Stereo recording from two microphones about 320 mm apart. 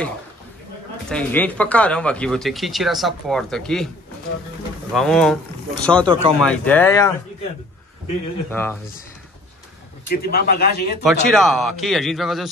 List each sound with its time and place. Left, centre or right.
1.0 s speech: centre
4.9 s speech: centre
6.0 s speech: centre
6.4 s speech: centre
8.5 s speech: centre
10.0 s a man's voice: left
11.2 s speech: centre